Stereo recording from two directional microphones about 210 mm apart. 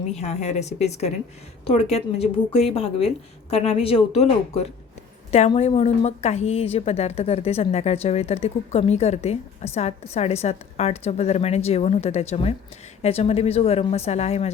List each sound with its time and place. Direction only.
0.1 s a woman's voice: 30° left (ahead or behind)